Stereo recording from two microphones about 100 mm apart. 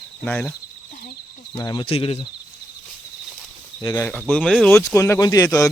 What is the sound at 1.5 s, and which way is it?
Speech, 45° left (ahead or behind).